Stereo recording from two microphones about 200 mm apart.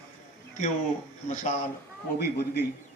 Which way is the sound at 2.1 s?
50° left (ahead or behind).